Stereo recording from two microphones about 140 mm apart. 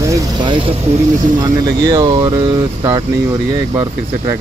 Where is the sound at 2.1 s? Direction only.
35° right (ahead or behind).